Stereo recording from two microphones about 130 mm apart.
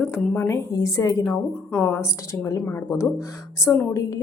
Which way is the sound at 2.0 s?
20° left (ahead or behind).